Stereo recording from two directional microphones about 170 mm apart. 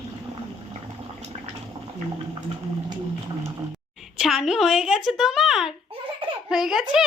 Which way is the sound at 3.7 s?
Centre (ahead or behind).